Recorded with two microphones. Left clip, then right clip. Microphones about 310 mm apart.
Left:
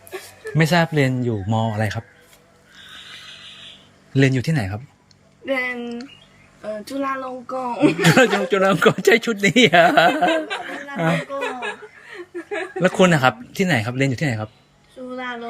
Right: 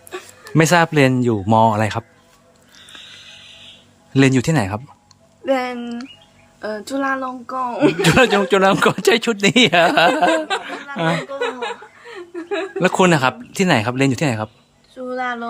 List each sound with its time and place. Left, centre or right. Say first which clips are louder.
0.5 s a woman's voice: right 5 dB; centre
1.3 s speech: right 10 dB; right
1.7 s a woman's voice: right 6 dB; centre
4.1 s a woman's voice: right 4 dB; centre
10.8 s speech: right 2 dB; centre
12.8 s a woman's voice: right 1 dB; centre